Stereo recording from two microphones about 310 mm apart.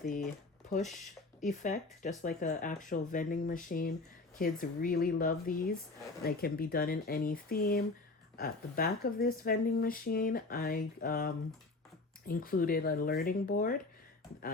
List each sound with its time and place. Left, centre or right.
1.4 s speech: left